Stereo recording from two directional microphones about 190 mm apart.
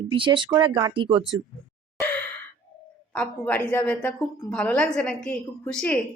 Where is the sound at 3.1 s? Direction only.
10° left (ahead or behind).